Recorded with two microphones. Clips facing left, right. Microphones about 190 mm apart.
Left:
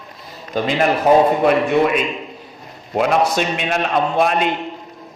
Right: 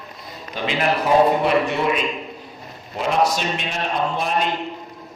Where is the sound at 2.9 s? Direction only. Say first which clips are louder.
Left 4 dB; 65° left (ahead or behind).